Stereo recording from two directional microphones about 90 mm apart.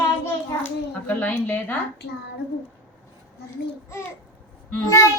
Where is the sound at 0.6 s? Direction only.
20° left (ahead or behind).